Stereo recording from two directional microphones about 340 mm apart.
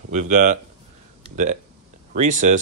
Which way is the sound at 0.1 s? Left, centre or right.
Right.